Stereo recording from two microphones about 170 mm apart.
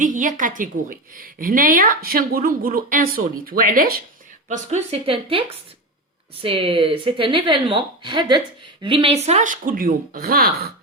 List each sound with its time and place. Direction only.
0.0 s a woman's voice: 50° right (ahead or behind)
4.4 s a woman's voice: 45° right (ahead or behind); by 10.7 s 60° right (ahead or behind)